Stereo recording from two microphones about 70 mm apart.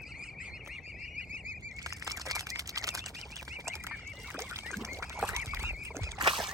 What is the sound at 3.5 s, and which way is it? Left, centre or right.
Duck, right.